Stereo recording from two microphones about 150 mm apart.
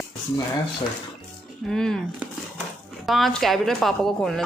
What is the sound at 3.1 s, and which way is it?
Speech, centre (ahead or behind).